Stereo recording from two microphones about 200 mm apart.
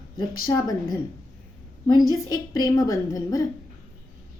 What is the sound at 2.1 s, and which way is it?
A woman's voice, 20° left (ahead or behind).